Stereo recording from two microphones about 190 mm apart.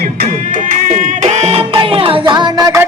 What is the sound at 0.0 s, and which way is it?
Music, 45° right (ahead or behind).